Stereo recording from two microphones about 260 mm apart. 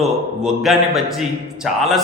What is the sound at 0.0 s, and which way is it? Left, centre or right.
A man's voice, centre.